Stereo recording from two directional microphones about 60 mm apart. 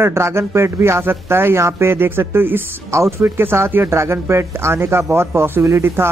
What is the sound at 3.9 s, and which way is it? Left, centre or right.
A man's voice, right.